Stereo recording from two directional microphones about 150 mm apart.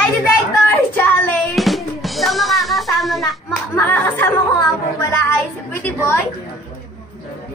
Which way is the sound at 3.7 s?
15° left (ahead or behind).